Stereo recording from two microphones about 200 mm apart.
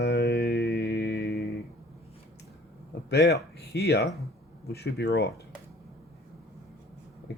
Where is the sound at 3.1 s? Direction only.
55° left (ahead or behind).